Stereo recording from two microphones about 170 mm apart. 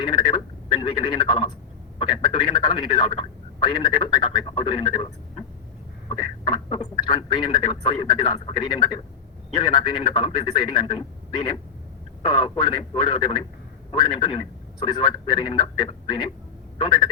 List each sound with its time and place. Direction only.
0.0 s telephone: 25° left (ahead or behind)
2.0 s a man's voice: 25° left (ahead or behind)